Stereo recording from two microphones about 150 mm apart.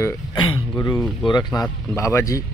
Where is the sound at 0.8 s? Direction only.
20° left (ahead or behind).